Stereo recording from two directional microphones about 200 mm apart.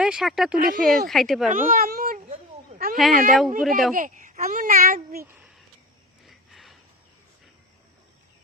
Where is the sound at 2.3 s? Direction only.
45° right (ahead or behind).